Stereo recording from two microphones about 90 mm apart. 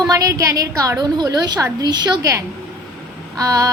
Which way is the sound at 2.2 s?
35° right (ahead or behind).